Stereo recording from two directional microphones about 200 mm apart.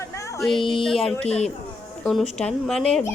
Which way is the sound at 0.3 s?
Centre (ahead or behind).